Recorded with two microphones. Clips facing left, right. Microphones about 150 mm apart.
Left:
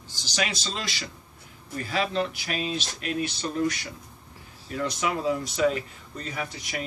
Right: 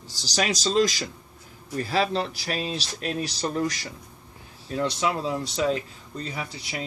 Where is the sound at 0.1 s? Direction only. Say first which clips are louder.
Right 4 dB; 35° right (ahead or behind).